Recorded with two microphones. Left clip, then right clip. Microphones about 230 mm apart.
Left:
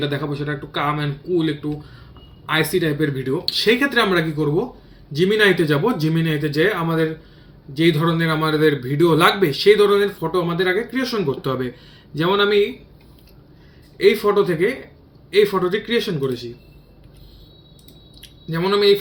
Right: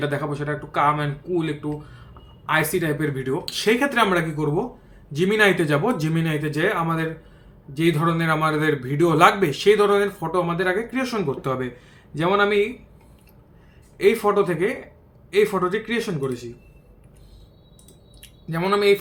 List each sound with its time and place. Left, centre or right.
0.0 s a man's voice: centre
14.2 s speech: centre
18.5 s a man's voice: centre